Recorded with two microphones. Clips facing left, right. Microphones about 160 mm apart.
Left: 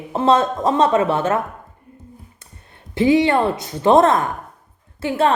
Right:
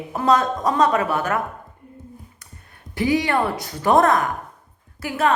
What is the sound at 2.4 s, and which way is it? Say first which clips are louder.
A woman's voice: even; 25° left (ahead or behind).